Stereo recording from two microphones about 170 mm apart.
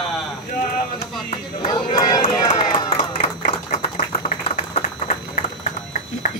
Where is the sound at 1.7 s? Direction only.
25° left (ahead or behind).